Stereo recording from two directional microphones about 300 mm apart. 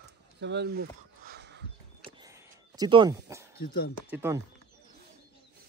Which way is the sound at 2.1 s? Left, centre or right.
Centre.